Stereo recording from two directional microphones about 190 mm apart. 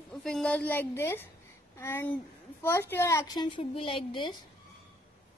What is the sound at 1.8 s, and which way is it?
A woman's voice, 10° left (ahead or behind).